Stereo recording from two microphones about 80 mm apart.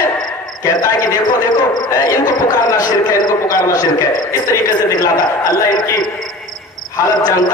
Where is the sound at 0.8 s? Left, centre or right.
Left.